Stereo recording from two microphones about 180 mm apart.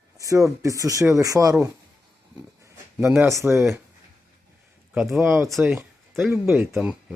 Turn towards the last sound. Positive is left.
turn(degrees=-5)  # may be behind; listen again after turning